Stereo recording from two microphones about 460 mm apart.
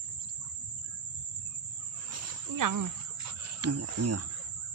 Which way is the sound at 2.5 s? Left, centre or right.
Right.